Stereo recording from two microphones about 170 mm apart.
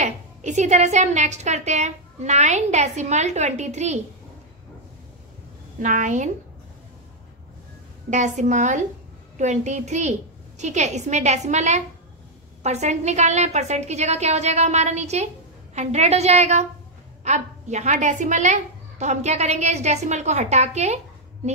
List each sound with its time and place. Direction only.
0.0 s a woman's voice: 45° right (ahead or behind)
5.8 s a woman's voice: 50° right (ahead or behind)
8.1 s a woman's voice: 45° right (ahead or behind)